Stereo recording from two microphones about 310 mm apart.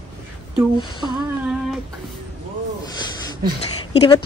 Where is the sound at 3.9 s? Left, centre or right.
Centre.